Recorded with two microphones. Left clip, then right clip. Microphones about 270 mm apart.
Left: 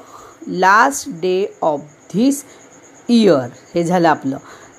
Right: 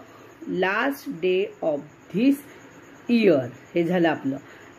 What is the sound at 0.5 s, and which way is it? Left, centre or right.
Speech, centre.